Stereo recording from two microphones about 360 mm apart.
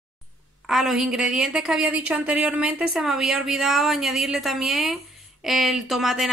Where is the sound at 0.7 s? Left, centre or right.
Centre.